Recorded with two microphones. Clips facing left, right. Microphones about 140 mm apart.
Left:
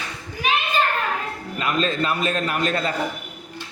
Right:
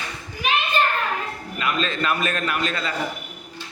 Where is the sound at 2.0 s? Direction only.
30° left (ahead or behind); by 2.9 s 45° left (ahead or behind).